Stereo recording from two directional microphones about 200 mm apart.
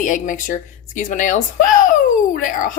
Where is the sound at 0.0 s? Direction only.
40° left (ahead or behind).